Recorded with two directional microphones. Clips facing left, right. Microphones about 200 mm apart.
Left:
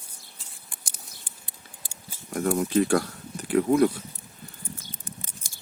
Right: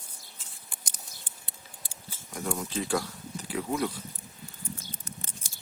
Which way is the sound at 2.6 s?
60° left (ahead or behind).